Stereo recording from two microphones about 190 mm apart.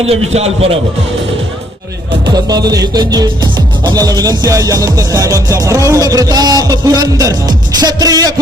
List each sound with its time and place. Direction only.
0.0 s a man's voice: 30° right (ahead or behind)
2.2 s music: 20° right (ahead or behind)